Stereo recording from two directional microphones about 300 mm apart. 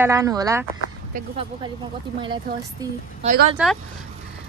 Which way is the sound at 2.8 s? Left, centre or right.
Centre.